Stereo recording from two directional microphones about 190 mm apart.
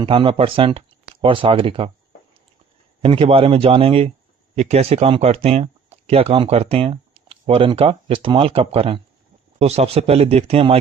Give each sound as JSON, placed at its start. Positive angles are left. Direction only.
{"t": 0.0, "sound": "speech", "side_deg": -25}
{"t": 3.0, "sound": "speech", "side_deg": -30}